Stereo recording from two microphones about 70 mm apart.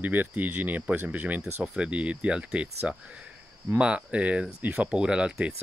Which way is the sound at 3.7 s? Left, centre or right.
Centre.